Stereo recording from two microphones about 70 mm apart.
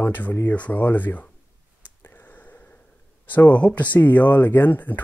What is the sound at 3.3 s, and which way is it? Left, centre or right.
Speech, left.